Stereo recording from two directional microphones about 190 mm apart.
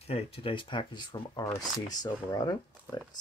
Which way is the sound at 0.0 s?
30° left (ahead or behind).